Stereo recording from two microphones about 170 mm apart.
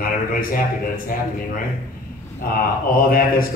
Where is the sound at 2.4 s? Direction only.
60° left (ahead or behind).